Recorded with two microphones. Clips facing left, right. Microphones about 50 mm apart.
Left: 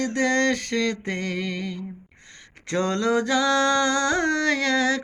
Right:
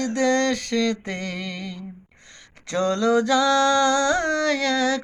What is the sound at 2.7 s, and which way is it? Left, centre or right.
Music, left.